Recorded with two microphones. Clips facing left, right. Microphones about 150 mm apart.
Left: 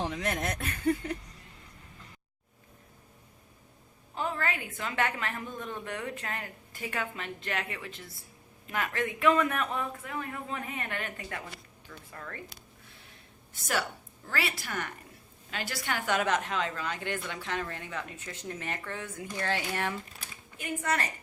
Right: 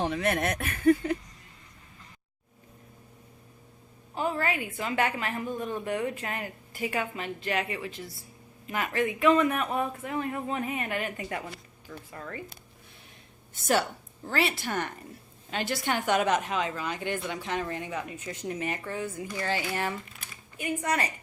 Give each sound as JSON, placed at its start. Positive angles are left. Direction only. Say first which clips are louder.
{"t": 0.0, "sound": "speech", "louder": "right 5 dB", "side_deg": -70}
{"t": 4.1, "sound": "a woman's voice", "louder": "right 4 dB", "side_deg": -10}
{"t": 10.0, "sound": "a woman's voice", "louder": "right 6 dB", "side_deg": -25}
{"t": 13.5, "sound": "a woman's voice", "louder": "right 6 dB", "side_deg": -30}
{"t": 20.6, "sound": "a woman's voice", "louder": "right 3 dB", "side_deg": -15}